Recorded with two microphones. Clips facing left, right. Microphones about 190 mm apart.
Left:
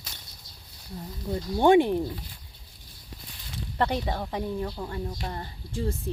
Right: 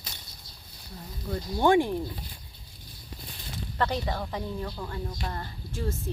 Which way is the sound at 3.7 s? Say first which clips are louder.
Left 2 dB; 15° left (ahead or behind).